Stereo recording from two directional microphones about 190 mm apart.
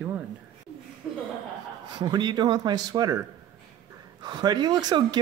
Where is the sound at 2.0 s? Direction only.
25° right (ahead or behind).